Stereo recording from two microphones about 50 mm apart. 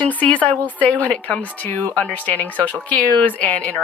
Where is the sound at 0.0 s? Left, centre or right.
Left.